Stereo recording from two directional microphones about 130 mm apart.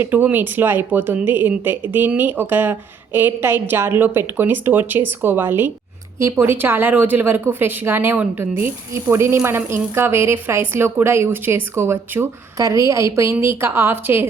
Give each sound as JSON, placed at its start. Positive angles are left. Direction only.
{"t": 0.0, "sound": "a woman's voice", "side_deg": -15}